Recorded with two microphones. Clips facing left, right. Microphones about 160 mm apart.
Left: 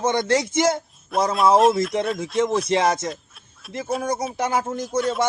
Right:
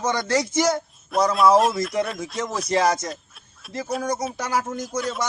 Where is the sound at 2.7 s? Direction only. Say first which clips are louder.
Left 1 dB; 25° left (ahead or behind).